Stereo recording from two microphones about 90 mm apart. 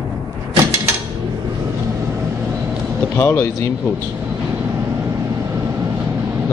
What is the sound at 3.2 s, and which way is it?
Speech, 30° left (ahead or behind).